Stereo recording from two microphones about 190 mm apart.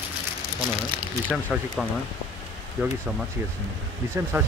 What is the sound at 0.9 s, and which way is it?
Speech, 25° right (ahead or behind).